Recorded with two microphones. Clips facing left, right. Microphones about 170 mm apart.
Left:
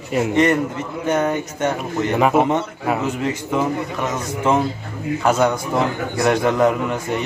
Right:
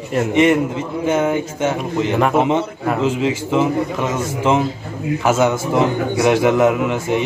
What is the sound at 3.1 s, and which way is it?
Speech, 90° right.